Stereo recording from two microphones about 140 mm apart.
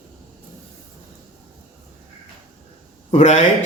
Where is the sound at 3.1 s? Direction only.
55° left (ahead or behind).